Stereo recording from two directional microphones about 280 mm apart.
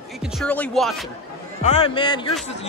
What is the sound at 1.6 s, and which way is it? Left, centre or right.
Speech, left.